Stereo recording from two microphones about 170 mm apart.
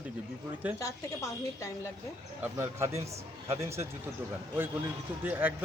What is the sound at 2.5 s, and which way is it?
Speech, 15° right (ahead or behind).